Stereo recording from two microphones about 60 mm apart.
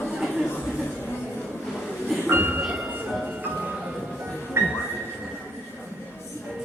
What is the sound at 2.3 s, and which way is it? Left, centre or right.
Train, right.